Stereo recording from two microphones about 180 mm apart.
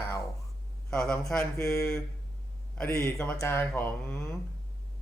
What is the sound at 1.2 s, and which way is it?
Speech, 5° left (ahead or behind).